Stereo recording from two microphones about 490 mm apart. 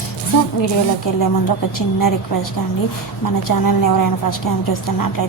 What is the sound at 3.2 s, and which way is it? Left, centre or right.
A woman's voice, left.